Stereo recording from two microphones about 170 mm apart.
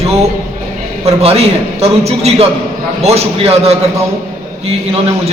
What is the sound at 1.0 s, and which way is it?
A man's voice, 35° right (ahead or behind).